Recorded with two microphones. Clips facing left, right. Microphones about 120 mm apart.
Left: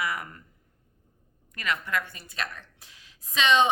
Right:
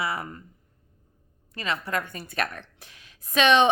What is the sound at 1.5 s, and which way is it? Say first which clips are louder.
Speech: right 1 dB; 30° right (ahead or behind).